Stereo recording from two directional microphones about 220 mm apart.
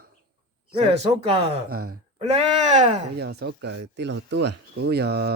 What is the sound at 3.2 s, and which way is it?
Speech, 45° right (ahead or behind).